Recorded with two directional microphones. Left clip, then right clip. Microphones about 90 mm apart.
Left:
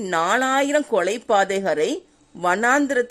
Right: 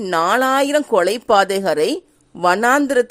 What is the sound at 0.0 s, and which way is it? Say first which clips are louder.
Speech: right 4 dB; 15° right (ahead or behind).